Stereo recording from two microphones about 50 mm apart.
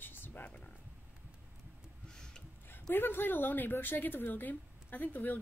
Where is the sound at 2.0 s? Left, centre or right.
Centre.